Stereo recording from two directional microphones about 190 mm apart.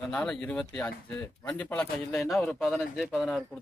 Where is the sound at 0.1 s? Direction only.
5° left (ahead or behind).